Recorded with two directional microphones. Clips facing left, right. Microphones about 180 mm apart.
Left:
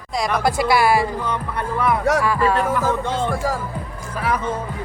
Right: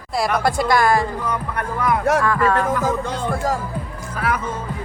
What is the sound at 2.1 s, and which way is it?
Speech, 10° left (ahead or behind).